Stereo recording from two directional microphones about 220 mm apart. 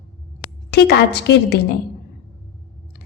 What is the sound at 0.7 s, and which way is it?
Speech, 50° left (ahead or behind).